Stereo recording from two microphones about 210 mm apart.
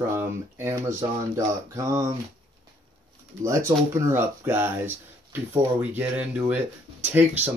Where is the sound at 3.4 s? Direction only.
15° right (ahead or behind).